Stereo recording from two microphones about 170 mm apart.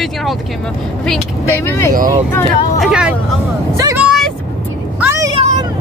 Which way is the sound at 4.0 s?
Centre (ahead or behind).